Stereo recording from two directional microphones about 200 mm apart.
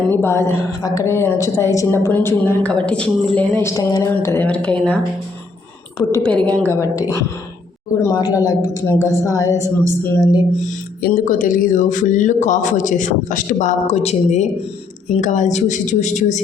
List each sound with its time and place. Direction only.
0.1 s a woman's voice: 10° left (ahead or behind)
6.0 s a woman's voice: 10° left (ahead or behind)
11.0 s a man's voice: 45° left (ahead or behind)